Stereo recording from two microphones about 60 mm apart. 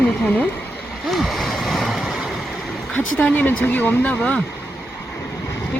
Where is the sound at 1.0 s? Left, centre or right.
Centre.